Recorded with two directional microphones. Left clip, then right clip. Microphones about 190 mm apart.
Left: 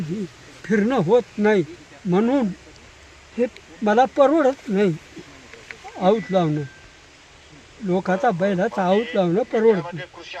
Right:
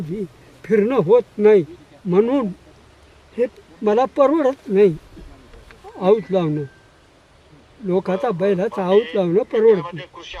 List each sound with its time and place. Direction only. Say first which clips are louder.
0.6 s speech: right 4 dB; 25° right (ahead or behind)
3.4 s speech: right 2 dB; 25° right (ahead or behind)
6.0 s speech: right 2 dB; 25° right (ahead or behind)
7.9 s speech: even; 25° right (ahead or behind)